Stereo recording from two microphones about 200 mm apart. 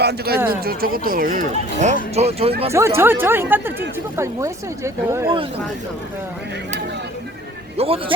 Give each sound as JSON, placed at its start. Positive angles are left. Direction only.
{"t": 0.0, "sound": "speech", "side_deg": -55}
{"t": 2.7, "sound": "speech", "side_deg": -15}
{"t": 7.8, "sound": "speech", "side_deg": -30}